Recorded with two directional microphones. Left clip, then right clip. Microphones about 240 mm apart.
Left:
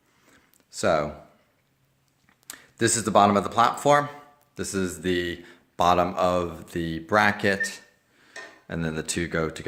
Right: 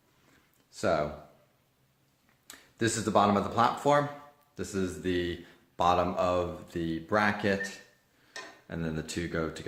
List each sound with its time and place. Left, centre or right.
0.8 s a man's voice: left
2.5 s a man's voice: left